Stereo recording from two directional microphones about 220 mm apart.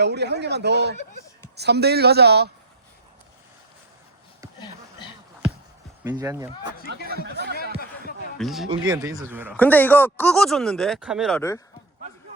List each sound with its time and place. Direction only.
0.0 s a man's voice: 50° right (ahead or behind)
4.6 s a sound: 20° left (ahead or behind)
6.0 s speech: 10° right (ahead or behind)
7.1 s speech: 45° right (ahead or behind)
8.4 s speech: centre (ahead or behind)
8.7 s speech: 20° right (ahead or behind)
9.6 s speech: 10° left (ahead or behind)